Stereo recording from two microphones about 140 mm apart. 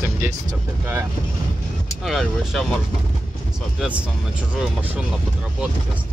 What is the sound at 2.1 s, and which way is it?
Speech, centre (ahead or behind).